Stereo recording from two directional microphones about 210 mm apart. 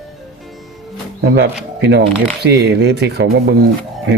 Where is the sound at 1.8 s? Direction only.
55° right (ahead or behind).